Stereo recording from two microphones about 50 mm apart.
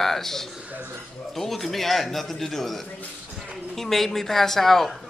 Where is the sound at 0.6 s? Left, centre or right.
Right.